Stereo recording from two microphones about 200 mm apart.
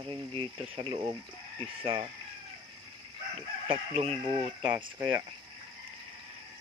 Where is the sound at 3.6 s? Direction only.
30° right (ahead or behind).